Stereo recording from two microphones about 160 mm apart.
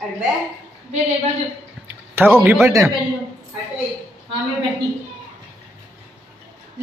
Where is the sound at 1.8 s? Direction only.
15° right (ahead or behind).